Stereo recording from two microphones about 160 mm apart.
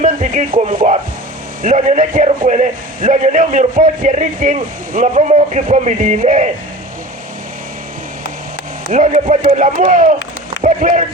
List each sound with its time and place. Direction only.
0.0 s a man's voice: 60° right (ahead or behind)
8.9 s a man's voice: 50° right (ahead or behind)